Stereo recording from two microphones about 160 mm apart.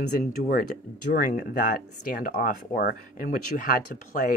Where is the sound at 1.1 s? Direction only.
60° left (ahead or behind).